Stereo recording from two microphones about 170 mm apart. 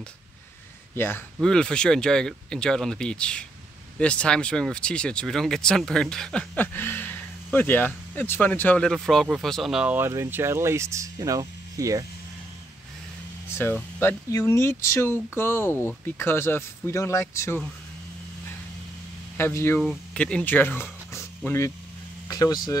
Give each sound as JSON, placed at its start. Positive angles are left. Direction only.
{"t": 0.9, "sound": "speech", "side_deg": 15}
{"t": 13.5, "sound": "speech", "side_deg": 15}
{"t": 19.3, "sound": "speech", "side_deg": 15}
{"t": 19.8, "sound": "speech", "side_deg": 5}